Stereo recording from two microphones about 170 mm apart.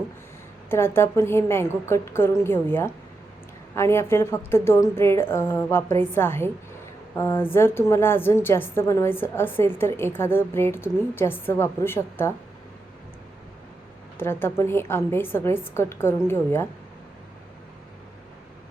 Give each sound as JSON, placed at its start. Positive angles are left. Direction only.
{"t": 0.7, "sound": "a woman's voice", "side_deg": 15}
{"t": 14.2, "sound": "a woman's voice", "side_deg": 15}